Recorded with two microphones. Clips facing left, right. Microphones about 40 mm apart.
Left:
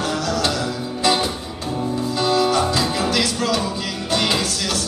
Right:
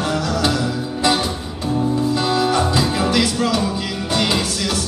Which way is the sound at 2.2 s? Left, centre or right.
Centre.